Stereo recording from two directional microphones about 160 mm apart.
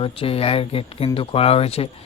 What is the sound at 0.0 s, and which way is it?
Speech, 35° left (ahead or behind).